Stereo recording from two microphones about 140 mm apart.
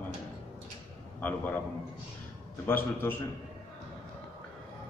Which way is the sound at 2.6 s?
15° left (ahead or behind).